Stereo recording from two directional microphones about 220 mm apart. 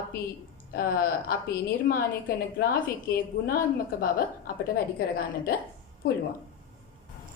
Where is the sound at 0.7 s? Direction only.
40° left (ahead or behind).